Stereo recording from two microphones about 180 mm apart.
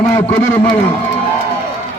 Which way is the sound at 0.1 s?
10° left (ahead or behind).